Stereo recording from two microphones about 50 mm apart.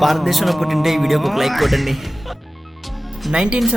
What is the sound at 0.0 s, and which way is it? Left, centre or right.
Speech, centre.